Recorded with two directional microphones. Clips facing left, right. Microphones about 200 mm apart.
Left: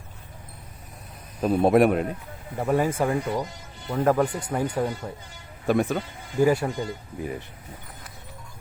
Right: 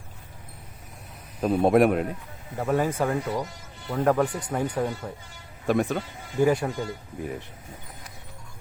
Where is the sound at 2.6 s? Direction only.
15° left (ahead or behind).